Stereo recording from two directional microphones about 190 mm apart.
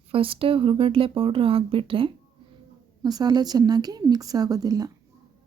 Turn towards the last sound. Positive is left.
turn(degrees=-20)  # may be behind; listen again after turning